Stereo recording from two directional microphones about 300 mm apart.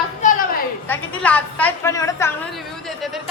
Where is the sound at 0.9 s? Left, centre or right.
Centre.